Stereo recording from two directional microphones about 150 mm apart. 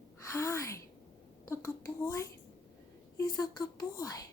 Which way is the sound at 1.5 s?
20° left (ahead or behind).